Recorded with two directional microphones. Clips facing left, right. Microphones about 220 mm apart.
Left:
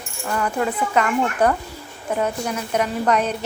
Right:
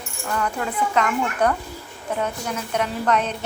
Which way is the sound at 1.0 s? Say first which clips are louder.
Left 2 dB; 10° left (ahead or behind).